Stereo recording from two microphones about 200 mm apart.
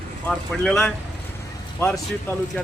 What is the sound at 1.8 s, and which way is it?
Speech, 15° left (ahead or behind).